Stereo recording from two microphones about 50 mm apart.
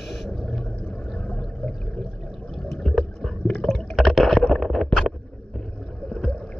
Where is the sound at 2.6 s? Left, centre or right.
Centre.